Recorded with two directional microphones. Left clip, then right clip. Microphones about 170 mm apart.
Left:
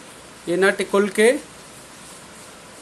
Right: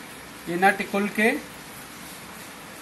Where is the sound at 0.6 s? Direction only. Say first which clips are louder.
Left 2 dB; 55° left (ahead or behind).